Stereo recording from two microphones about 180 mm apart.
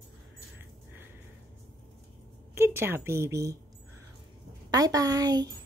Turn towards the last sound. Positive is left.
turn(degrees=-20)  # may be behind; listen again after turning